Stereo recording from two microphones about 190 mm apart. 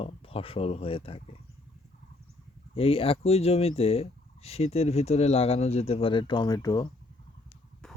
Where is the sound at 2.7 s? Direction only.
30° left (ahead or behind).